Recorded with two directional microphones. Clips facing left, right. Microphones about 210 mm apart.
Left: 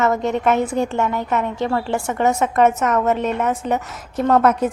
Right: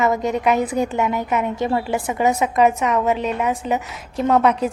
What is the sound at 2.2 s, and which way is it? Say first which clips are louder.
A woman's voice: left 1 dB; centre (ahead or behind).